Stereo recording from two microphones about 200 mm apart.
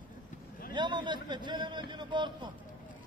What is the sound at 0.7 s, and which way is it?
A man's voice, 25° right (ahead or behind).